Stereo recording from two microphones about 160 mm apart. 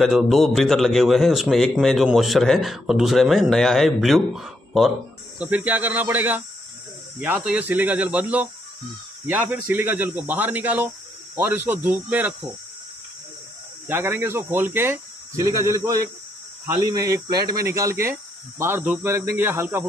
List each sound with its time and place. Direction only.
0.0 s speech: centre (ahead or behind)
13.8 s speech: 10° right (ahead or behind)